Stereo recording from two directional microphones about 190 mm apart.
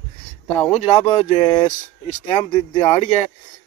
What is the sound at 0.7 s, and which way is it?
Speech, 30° left (ahead or behind).